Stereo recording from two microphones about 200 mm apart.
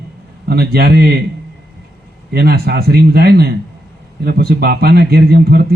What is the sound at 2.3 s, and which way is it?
Speech, 50° right (ahead or behind).